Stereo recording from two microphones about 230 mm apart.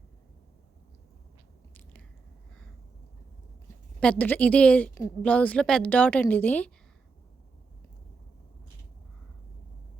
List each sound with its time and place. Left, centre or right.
1.7 s biting: centre
4.0 s a woman's voice: centre